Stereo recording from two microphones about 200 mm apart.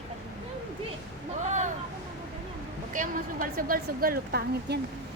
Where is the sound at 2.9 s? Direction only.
40° right (ahead or behind).